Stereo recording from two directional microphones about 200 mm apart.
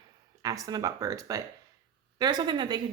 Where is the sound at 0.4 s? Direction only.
15° right (ahead or behind).